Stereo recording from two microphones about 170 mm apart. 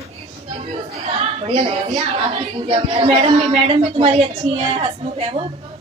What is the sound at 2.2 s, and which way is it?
Speech, 30° right (ahead or behind).